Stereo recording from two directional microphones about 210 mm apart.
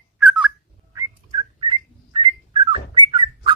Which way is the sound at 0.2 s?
5° right (ahead or behind).